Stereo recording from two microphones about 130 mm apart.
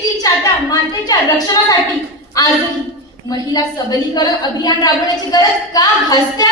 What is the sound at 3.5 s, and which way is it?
A woman's voice, 30° left (ahead or behind).